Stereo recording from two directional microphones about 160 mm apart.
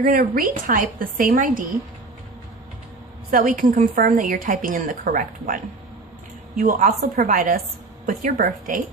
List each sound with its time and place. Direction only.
0.0 s speech: 60° right (ahead or behind)
3.3 s speech: 55° right (ahead or behind)
6.6 s speech: 55° right (ahead or behind)